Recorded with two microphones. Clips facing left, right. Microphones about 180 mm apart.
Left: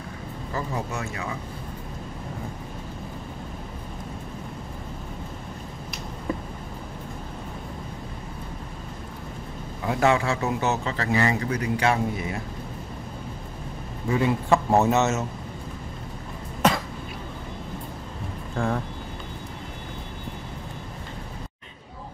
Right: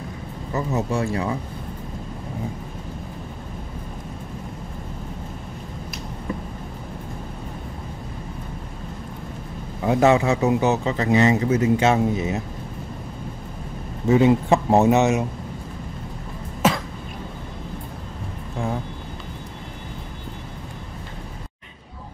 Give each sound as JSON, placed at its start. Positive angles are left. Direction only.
{"t": 0.5, "sound": "speech", "side_deg": -20}
{"t": 9.8, "sound": "speech", "side_deg": -20}
{"t": 14.0, "sound": "speech", "side_deg": -20}